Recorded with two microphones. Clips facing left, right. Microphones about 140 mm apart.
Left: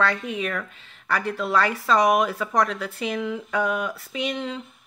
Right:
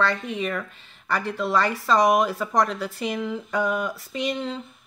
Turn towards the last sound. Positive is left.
turn(degrees=-5)  # may be behind; listen again after turning